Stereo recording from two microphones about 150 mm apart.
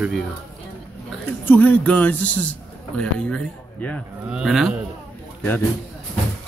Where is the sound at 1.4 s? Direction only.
10° left (ahead or behind).